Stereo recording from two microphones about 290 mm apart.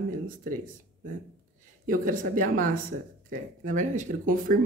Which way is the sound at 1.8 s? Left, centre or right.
Right.